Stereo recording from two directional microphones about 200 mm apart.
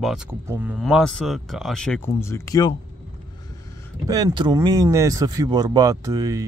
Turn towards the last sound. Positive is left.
turn(degrees=-15)  # may be behind; listen again after turning